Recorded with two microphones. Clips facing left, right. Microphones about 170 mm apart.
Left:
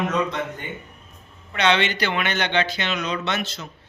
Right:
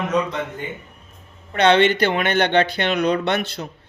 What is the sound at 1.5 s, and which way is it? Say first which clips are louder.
A man's voice: right 6 dB; 50° right (ahead or behind).